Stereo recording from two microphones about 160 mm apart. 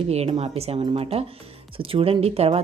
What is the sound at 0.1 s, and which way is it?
A woman's voice, 40° right (ahead or behind).